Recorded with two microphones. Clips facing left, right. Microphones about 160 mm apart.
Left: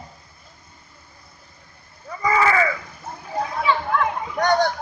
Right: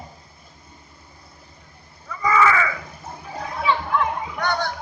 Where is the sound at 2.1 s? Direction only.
35° left (ahead or behind).